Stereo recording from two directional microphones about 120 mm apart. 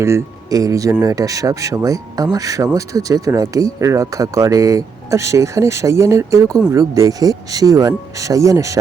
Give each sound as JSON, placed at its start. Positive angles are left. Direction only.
{"t": 0.0, "sound": "speech", "side_deg": -25}